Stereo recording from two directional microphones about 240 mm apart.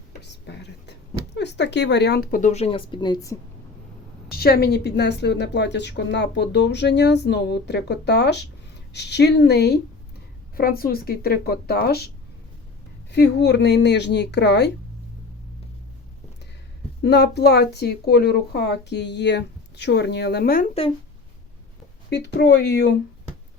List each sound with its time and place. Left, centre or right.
0.2 s speech: left; by 3.3 s centre
4.3 s a woman's voice: left
17.0 s a woman's voice: left
22.1 s a woman's voice: left